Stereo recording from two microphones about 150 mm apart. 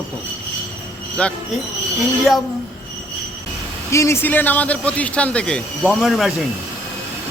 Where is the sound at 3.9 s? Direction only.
20° left (ahead or behind).